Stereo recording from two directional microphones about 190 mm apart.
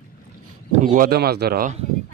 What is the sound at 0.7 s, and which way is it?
Speech, 45° right (ahead or behind).